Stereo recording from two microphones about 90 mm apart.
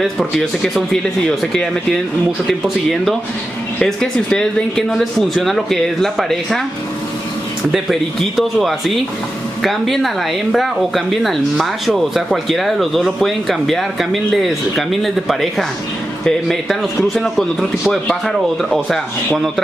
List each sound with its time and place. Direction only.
0.0 s speech: centre (ahead or behind)
7.7 s speech: centre (ahead or behind)